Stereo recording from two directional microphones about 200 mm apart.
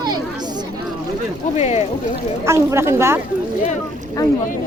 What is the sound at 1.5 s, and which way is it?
Speech, 35° left (ahead or behind).